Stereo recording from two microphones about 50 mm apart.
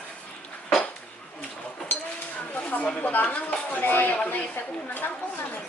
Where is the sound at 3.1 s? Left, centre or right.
Left.